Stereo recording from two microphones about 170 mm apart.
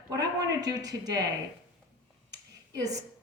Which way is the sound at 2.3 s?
20° right (ahead or behind).